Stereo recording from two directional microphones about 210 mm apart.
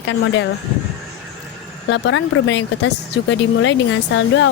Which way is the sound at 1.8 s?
60° left (ahead or behind).